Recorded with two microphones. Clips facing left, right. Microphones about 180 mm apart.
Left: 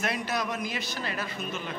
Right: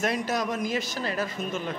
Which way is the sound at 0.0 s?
40° right (ahead or behind).